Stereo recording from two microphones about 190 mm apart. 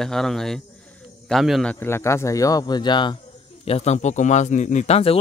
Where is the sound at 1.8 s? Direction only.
15° left (ahead or behind).